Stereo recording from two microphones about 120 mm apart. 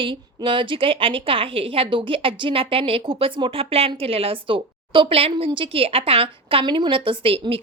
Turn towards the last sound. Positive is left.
turn(degrees=-50)  # may be behind; listen again after turning